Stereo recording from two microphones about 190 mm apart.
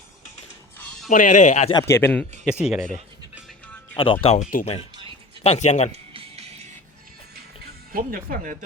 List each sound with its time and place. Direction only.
0.8 s music: centre (ahead or behind)
1.1 s speech: 45° left (ahead or behind)
1.7 s a man's voice: 15° left (ahead or behind)
2.4 s speech: 5° right (ahead or behind)
3.9 s speech: 30° left (ahead or behind)
5.9 s music: 30° right (ahead or behind)
7.6 s speech: 50° right (ahead or behind)